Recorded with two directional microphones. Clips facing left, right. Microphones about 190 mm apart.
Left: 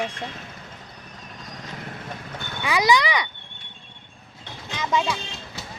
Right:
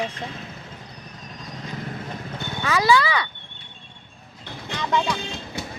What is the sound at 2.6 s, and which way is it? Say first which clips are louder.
Speech: right 1 dB; 15° left (ahead or behind).